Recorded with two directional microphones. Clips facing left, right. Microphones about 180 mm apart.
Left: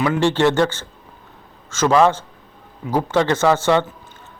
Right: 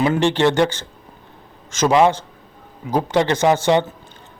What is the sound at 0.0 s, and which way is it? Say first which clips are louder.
A man's voice: even; 20° right (ahead or behind).